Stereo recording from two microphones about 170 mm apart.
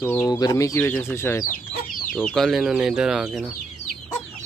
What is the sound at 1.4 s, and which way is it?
Chicken, 55° left (ahead or behind).